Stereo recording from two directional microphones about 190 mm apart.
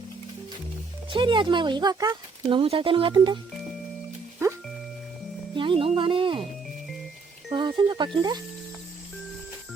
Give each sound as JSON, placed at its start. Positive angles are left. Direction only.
{"t": 1.1, "sound": "speech", "side_deg": -25}
{"t": 5.5, "sound": "speech", "side_deg": -25}
{"t": 7.5, "sound": "speech", "side_deg": -25}